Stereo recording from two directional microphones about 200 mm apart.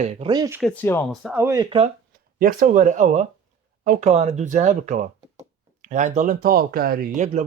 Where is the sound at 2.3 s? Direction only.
45° right (ahead or behind).